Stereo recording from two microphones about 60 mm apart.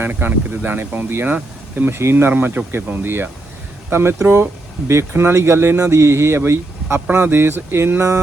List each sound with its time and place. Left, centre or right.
0.0 s speech: right
1.8 s speech: right